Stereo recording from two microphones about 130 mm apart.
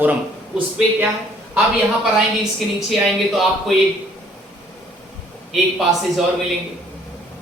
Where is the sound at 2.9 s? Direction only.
Centre (ahead or behind).